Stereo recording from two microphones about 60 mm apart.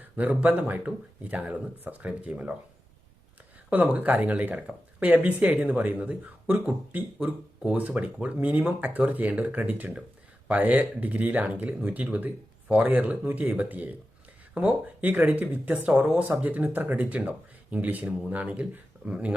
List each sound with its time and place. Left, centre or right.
0.2 s speech: right
3.7 s speech: right